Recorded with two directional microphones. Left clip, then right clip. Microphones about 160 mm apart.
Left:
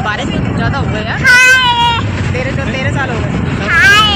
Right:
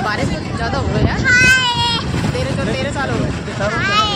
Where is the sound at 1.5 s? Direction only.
30° left (ahead or behind).